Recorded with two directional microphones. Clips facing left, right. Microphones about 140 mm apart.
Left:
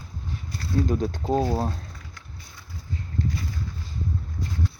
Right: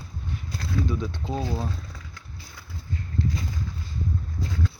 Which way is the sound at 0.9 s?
45° left (ahead or behind).